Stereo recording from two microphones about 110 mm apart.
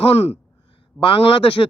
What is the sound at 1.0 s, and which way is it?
Speech, 55° left (ahead or behind).